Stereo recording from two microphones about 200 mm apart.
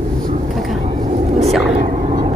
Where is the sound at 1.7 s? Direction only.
35° right (ahead or behind).